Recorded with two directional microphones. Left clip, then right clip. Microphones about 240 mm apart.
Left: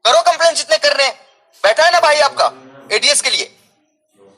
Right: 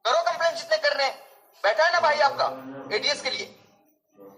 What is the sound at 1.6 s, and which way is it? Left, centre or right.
Speech, left.